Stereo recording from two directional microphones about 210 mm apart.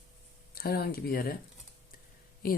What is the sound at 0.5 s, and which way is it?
Speech, 45° left (ahead or behind).